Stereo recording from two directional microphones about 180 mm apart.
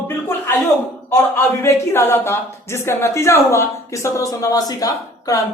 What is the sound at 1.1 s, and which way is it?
Speech, 15° left (ahead or behind).